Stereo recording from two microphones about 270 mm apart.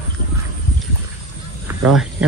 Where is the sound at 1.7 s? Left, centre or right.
Centre.